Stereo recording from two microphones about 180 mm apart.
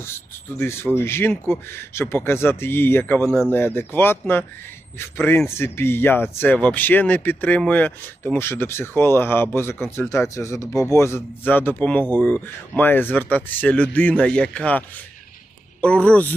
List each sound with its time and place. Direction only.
0.6 s speech: 15° left (ahead or behind)